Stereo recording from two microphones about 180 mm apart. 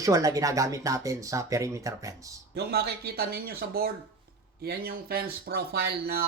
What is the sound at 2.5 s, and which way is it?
Speech, 65° right (ahead or behind).